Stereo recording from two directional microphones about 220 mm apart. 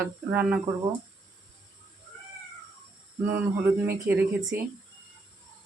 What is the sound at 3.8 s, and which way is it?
Speech, 10° right (ahead or behind).